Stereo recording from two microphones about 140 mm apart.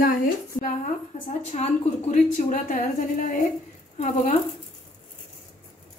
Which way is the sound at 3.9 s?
60° left (ahead or behind).